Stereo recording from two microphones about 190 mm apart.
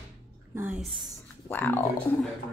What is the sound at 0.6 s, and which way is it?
Speech, 10° right (ahead or behind).